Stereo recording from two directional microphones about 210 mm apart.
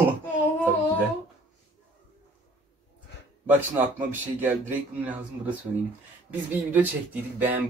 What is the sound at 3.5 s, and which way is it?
Speech, 10° right (ahead or behind).